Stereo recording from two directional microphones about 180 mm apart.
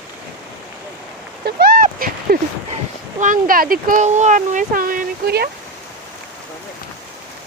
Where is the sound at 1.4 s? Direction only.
55° right (ahead or behind).